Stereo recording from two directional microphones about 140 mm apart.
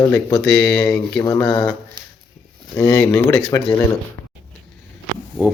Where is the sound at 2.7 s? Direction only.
25° left (ahead or behind).